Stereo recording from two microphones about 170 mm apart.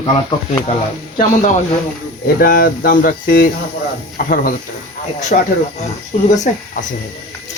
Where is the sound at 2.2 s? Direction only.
60° left (ahead or behind).